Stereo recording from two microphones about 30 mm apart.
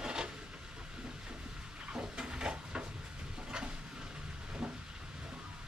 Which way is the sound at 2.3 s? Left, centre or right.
Right.